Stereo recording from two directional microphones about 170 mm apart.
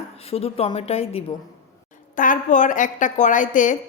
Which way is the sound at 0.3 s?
35° left (ahead or behind).